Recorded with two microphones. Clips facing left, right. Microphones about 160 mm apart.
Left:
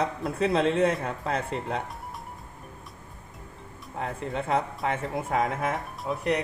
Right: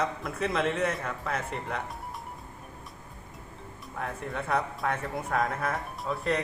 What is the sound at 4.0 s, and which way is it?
Speech, 25° left (ahead or behind).